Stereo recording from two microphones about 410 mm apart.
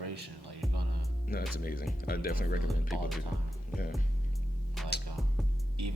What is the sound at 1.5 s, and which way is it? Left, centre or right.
Speech, left.